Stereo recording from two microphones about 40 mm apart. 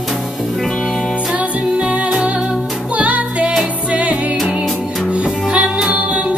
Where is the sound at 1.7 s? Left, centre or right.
Right.